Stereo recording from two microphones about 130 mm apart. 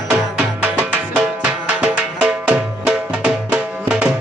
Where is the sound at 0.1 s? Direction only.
10° right (ahead or behind).